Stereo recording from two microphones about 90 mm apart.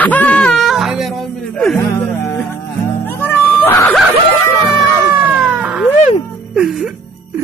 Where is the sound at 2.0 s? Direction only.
25° left (ahead or behind).